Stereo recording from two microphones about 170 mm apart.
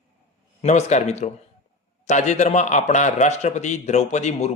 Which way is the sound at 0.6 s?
40° left (ahead or behind).